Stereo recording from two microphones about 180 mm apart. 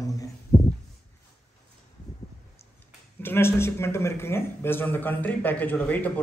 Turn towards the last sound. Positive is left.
turn(degrees=10)  # may be behind; listen again after turning